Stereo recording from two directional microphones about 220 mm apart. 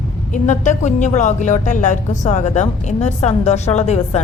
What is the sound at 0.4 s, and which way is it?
Speech, 35° left (ahead or behind).